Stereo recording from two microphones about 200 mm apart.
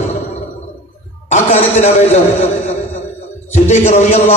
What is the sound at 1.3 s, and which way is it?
Speech, 35° left (ahead or behind).